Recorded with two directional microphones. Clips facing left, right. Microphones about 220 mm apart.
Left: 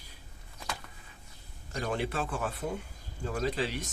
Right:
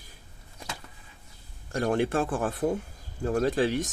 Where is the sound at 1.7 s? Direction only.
50° right (ahead or behind).